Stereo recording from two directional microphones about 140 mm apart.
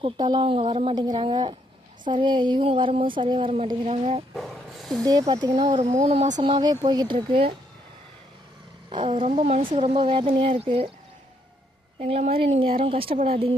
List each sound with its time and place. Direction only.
0.0 s speech: 35° right (ahead or behind)
0.9 s a woman's voice: 30° right (ahead or behind); by 4.2 s 45° right (ahead or behind)
4.4 s dog: centre (ahead or behind)
5.0 s speech: 30° right (ahead or behind)
5.9 s a woman's voice: 50° right (ahead or behind)
6.3 s speech: 30° right (ahead or behind)
8.9 s speech: 40° right (ahead or behind)
9.3 s speech: 50° right (ahead or behind)
11.9 s a woman's voice: 45° right (ahead or behind)